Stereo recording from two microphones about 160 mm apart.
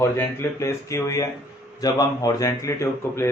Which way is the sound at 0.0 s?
15° left (ahead or behind).